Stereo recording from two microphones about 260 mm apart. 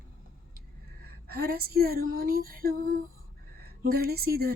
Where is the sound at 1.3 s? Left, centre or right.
Right.